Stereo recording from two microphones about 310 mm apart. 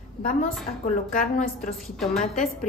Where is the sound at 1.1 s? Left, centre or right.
Left.